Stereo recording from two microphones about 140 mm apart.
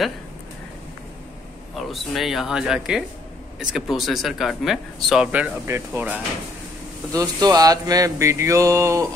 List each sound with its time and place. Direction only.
1.8 s a man's voice: centre (ahead or behind)
7.1 s mantra: 25° right (ahead or behind)